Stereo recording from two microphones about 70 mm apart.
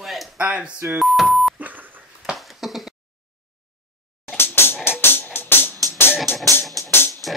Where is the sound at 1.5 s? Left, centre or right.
Right.